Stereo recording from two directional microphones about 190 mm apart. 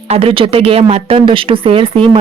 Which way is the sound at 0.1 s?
30° right (ahead or behind).